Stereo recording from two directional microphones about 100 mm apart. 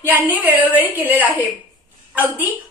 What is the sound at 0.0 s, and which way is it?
A woman's voice, 15° right (ahead or behind).